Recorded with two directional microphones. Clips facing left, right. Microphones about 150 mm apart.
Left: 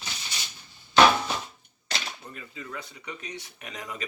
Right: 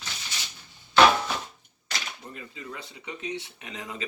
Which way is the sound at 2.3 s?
20° right (ahead or behind).